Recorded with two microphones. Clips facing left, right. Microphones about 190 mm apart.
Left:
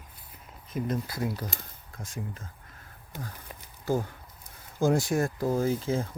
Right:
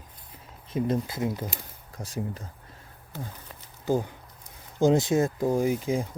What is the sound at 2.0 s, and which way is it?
Speech, 35° right (ahead or behind).